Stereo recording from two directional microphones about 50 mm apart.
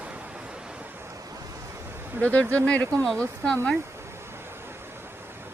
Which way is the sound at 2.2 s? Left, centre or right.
Left.